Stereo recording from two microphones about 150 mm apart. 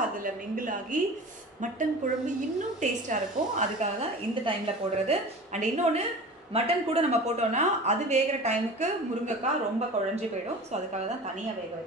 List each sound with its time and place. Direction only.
0.2 s a woman's voice: 65° right (ahead or behind)
5.0 s speech: 50° right (ahead or behind)